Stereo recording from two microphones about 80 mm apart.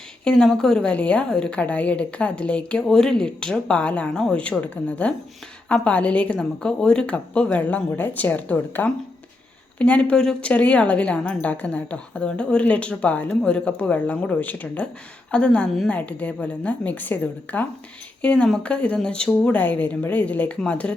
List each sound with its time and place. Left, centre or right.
0.3 s a woman's voice: centre